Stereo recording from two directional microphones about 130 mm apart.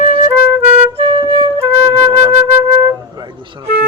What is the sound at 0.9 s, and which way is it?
Music, 40° right (ahead or behind).